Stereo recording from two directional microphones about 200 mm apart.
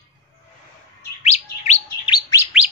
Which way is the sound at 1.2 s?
35° left (ahead or behind).